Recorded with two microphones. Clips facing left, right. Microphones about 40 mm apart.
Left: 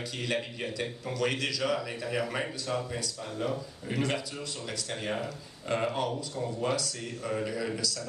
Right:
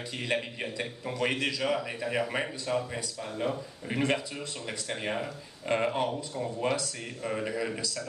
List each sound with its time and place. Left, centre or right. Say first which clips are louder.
0.3 s a man's voice: right 2 dB; right